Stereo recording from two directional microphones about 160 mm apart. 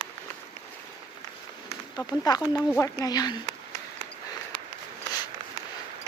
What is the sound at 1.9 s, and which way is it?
Speech, 25° left (ahead or behind).